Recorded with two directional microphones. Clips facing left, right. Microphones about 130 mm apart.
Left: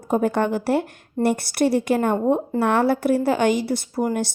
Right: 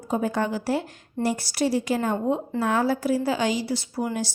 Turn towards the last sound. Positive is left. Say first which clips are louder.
# left 5 dB
turn(degrees=50)  # may be behind; listen again after turning